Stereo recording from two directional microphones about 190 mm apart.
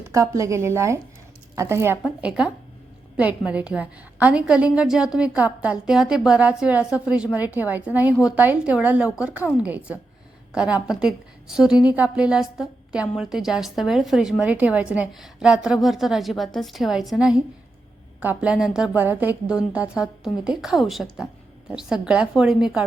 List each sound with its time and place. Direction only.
0.0 s a woman's voice: 15° right (ahead or behind)